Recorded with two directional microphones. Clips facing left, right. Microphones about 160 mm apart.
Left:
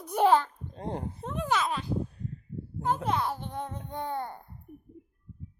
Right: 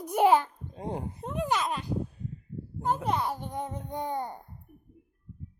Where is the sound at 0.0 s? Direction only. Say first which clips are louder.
Right 1 dB; 15° right (ahead or behind).